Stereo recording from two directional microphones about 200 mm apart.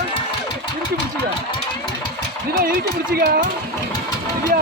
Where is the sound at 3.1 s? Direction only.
50° right (ahead or behind).